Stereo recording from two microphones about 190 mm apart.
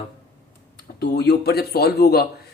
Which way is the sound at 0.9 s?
60° left (ahead or behind).